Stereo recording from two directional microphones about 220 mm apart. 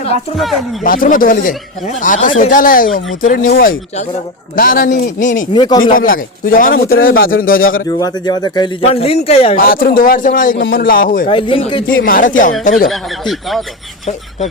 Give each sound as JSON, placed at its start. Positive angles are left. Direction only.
{"t": 0.3, "sound": "speech", "side_deg": 0}
{"t": 0.9, "sound": "speech", "side_deg": 40}
{"t": 5.5, "sound": "speech", "side_deg": 20}
{"t": 5.8, "sound": "speech", "side_deg": 40}
{"t": 7.9, "sound": "speech", "side_deg": 15}
{"t": 9.6, "sound": "speech", "side_deg": 40}
{"t": 11.3, "sound": "speech", "side_deg": 25}
{"t": 12.0, "sound": "speech", "side_deg": 40}
{"t": 12.9, "sound": "speech", "side_deg": 0}